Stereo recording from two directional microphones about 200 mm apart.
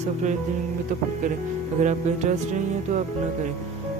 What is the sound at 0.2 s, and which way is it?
Music, 35° right (ahead or behind).